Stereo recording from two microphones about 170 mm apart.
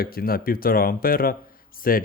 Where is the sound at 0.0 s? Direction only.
60° left (ahead or behind).